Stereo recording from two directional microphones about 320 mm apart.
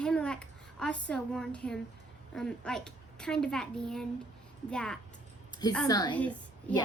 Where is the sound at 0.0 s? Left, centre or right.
Centre.